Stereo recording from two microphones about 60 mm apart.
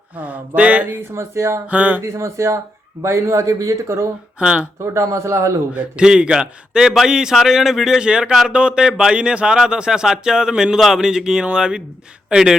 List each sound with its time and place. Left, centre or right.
0.2 s mantra: right
0.9 s speech: right
1.6 s mantra: right
2.1 s speech: right
4.4 s speech: centre
4.9 s speech: right
5.7 s speech: centre